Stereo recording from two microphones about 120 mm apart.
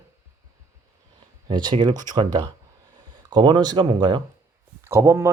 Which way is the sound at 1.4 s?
40° right (ahead or behind).